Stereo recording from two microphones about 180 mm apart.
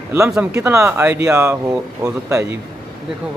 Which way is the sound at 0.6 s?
15° right (ahead or behind).